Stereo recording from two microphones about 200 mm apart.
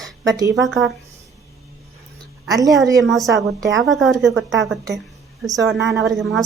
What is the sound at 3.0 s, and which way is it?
A woman's voice, centre (ahead or behind).